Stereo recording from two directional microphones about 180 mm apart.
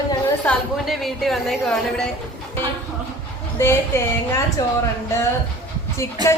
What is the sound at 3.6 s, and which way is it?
A woman's voice, 15° left (ahead or behind).